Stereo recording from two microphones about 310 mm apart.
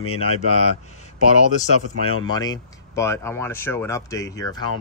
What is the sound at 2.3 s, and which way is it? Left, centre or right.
Speech, centre.